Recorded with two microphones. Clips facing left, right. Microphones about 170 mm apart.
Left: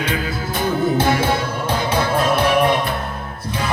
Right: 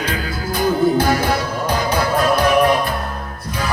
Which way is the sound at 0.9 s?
25° left (ahead or behind).